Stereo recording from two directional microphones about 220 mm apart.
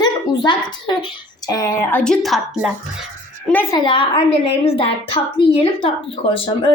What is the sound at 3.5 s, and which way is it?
A woman's voice, 15° left (ahead or behind).